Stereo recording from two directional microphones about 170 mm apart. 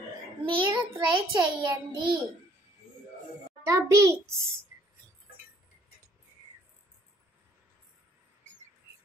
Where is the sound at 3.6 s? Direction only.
20° right (ahead or behind).